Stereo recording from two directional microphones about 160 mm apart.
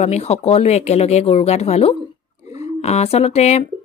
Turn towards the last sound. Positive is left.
turn(degrees=40)  # may be behind; listen again after turning